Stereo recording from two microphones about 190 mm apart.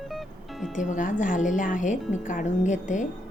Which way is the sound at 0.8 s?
40° left (ahead or behind).